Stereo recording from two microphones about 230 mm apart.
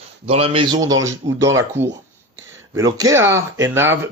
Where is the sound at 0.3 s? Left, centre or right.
Right.